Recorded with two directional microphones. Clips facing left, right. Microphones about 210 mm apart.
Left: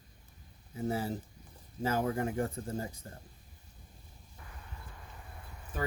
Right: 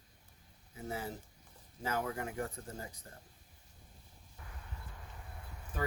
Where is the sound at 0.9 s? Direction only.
30° left (ahead or behind).